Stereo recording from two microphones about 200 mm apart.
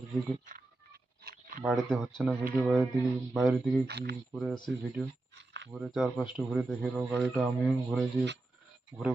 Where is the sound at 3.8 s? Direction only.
55° right (ahead or behind).